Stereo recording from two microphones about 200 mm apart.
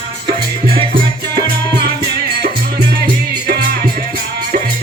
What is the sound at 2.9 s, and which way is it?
Music, 55° right (ahead or behind).